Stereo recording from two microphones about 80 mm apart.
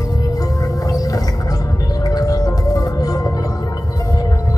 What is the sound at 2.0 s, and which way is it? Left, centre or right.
Music, left.